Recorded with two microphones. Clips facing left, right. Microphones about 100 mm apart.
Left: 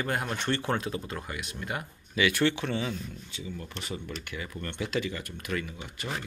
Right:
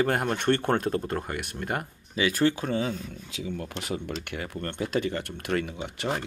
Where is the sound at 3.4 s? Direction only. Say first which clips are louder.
Right 6 dB; 75° right (ahead or behind).